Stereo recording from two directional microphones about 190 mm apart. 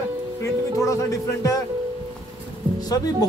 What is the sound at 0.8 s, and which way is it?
Speech, 15° left (ahead or behind).